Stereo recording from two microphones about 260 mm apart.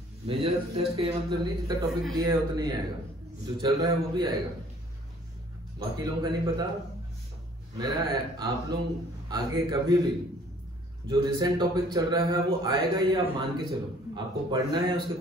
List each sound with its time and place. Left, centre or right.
0.3 s a man's voice: right
5.8 s a man's voice: centre
7.7 s a man's voice: centre